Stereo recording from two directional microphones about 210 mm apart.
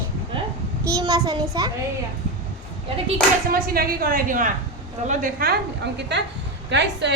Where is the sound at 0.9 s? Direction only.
15° right (ahead or behind).